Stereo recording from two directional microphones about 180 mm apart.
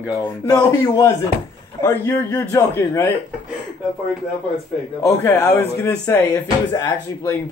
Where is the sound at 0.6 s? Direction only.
20° left (ahead or behind).